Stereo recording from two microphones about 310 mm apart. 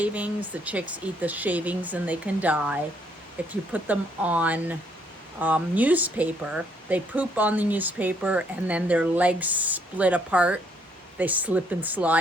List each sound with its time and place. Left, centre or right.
0.0 s speech: centre